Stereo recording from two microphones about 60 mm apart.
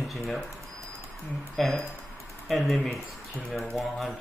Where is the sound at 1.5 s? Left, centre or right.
Centre.